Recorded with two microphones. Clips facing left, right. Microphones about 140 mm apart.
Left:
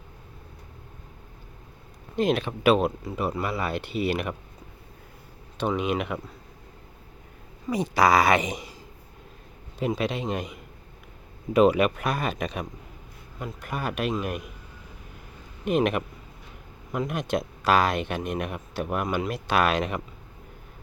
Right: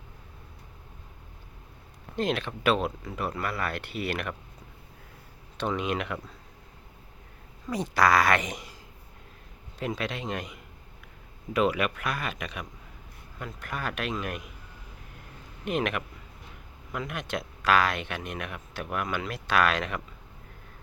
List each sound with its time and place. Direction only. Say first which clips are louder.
2.1 s a man's voice: left 5 dB; 15° left (ahead or behind)
2.8 s speech: left 5 dB; 25° left (ahead or behind)
4.0 s speech: left 5 dB; 5° left (ahead or behind)
5.5 s a man's voice: left 3 dB; 10° left (ahead or behind)
7.7 s a man's voice: left 3 dB; 10° left (ahead or behind)
9.8 s a man's voice: left 5 dB; 15° left (ahead or behind)
11.5 s speech: left 6 dB; 30° left (ahead or behind)
13.4 s a man's voice: left 3 dB; 10° left (ahead or behind)
15.8 s speech: left 6 dB; 40° left (ahead or behind)
19.3 s speech: left 1 dB; 20° left (ahead or behind)